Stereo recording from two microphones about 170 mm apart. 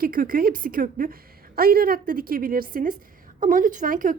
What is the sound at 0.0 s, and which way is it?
A woman's voice, 55° right (ahead or behind).